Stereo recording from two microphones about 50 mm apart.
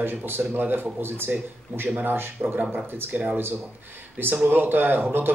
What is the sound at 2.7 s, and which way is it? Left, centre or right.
Speech, right.